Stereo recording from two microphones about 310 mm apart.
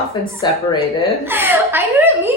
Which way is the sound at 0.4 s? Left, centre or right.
Centre.